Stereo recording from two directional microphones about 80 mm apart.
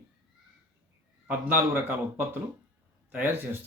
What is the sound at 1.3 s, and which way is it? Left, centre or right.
Speech, right.